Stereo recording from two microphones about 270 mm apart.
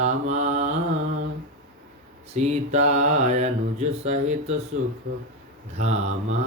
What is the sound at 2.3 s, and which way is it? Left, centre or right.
Mantra, right.